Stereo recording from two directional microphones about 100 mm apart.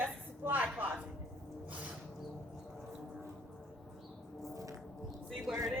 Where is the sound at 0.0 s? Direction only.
20° right (ahead or behind).